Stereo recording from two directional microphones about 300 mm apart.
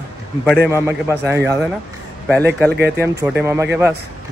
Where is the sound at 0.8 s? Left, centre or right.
Centre.